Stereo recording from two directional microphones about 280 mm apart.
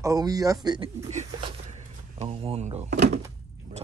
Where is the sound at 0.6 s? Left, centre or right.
Centre.